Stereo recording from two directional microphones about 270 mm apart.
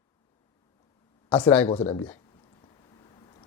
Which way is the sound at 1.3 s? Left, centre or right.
Centre.